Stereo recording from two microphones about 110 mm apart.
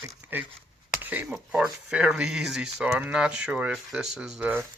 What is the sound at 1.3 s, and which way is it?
Speech, 5° right (ahead or behind).